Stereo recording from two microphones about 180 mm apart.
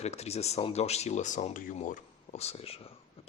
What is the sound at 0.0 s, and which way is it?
Speech, 35° left (ahead or behind).